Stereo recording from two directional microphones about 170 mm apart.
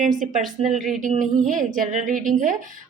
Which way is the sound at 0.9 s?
50° right (ahead or behind).